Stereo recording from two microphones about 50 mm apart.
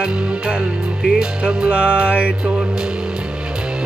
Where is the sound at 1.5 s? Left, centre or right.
Centre.